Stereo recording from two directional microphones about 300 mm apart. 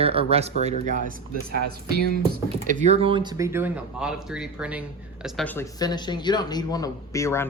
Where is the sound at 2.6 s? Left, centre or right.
Right.